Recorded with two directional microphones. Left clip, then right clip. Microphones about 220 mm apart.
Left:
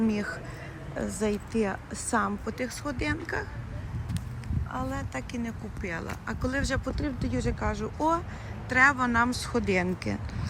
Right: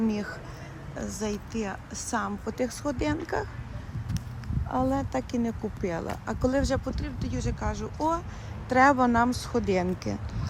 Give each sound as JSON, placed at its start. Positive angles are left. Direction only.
{"t": 0.1, "sound": "speech", "side_deg": -15}
{"t": 4.7, "sound": "speech", "side_deg": -25}
{"t": 7.0, "sound": "speech", "side_deg": -5}
{"t": 8.7, "sound": "speech", "side_deg": -25}